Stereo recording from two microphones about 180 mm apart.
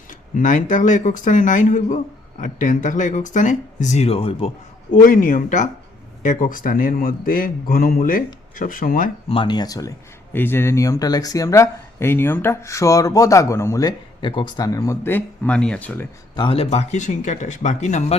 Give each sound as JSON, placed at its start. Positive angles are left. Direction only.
{"t": 0.3, "sound": "a man's voice", "side_deg": 45}
{"t": 4.9, "sound": "a man's voice", "side_deg": 50}
{"t": 9.3, "sound": "speech", "side_deg": 25}
{"t": 16.3, "sound": "speech", "side_deg": 30}